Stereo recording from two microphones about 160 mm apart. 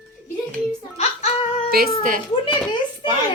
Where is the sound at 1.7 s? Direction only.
70° right (ahead or behind).